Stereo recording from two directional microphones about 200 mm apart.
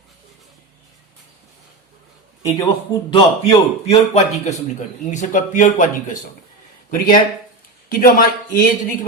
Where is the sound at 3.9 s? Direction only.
35° left (ahead or behind).